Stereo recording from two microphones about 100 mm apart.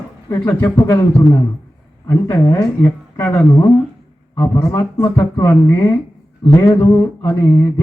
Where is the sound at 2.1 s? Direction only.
25° left (ahead or behind).